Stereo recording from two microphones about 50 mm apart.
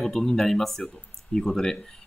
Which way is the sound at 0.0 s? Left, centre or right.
Centre.